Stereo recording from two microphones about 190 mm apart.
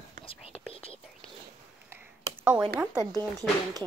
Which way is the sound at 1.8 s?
10° right (ahead or behind).